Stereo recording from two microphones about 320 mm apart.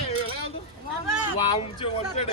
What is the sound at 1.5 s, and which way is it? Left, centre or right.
Speech, centre.